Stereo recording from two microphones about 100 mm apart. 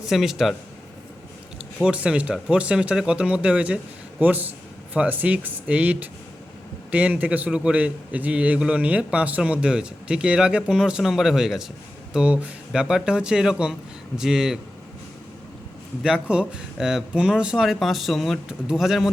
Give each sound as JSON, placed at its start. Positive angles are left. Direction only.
{"t": 0.0, "sound": "speech", "side_deg": -5}
{"t": 1.8, "sound": "a man's voice", "side_deg": -10}
{"t": 16.0, "sound": "speech", "side_deg": -10}